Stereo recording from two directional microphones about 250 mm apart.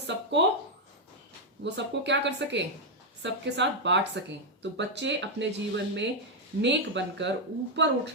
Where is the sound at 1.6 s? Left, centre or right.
Right.